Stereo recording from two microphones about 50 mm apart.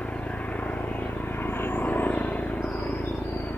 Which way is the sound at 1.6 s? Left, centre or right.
Left.